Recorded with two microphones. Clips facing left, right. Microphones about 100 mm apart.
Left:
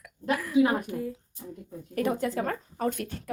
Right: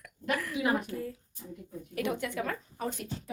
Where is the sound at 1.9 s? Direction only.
40° left (ahead or behind); by 3.3 s 60° left (ahead or behind).